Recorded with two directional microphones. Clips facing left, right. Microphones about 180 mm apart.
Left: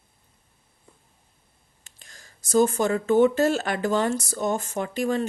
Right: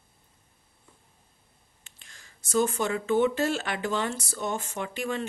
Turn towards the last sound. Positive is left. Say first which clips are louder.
# left 6 dB
turn(degrees=40)  # may be behind; listen again after turning